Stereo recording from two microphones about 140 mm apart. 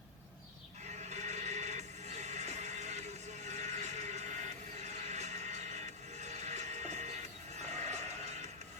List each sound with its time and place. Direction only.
0.9 s music: 55° right (ahead or behind)